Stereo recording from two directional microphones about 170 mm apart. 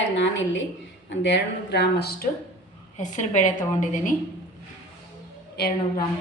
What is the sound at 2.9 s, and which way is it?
A woman's voice, 45° left (ahead or behind).